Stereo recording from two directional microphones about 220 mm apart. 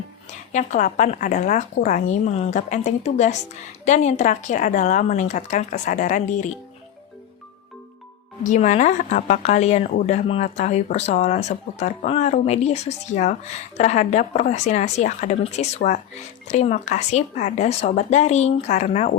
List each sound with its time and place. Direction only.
0.5 s speech: 35° left (ahead or behind)
8.4 s speech: 30° left (ahead or behind)